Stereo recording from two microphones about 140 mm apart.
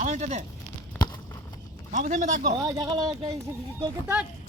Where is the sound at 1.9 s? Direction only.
60° right (ahead or behind).